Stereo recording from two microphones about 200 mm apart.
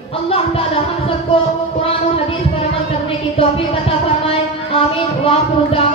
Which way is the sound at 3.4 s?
30° left (ahead or behind).